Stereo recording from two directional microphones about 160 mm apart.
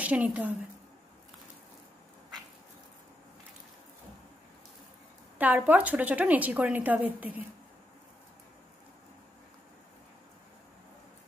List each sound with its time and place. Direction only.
0.0 s a woman's voice: 10° right (ahead or behind)
5.4 s a woman's voice: 10° right (ahead or behind)